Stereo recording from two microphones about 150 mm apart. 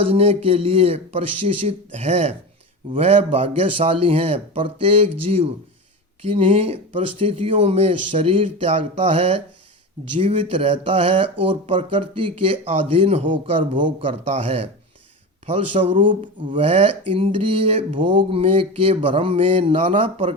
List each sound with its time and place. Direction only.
0.1 s speech: 40° right (ahead or behind)